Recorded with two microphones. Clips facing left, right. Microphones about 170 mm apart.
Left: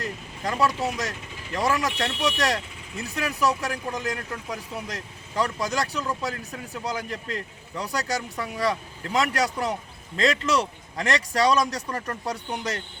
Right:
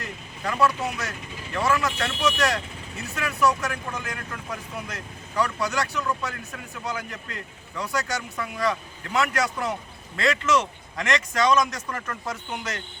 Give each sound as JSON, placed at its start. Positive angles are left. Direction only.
{"t": 0.0, "sound": "speech", "side_deg": 35}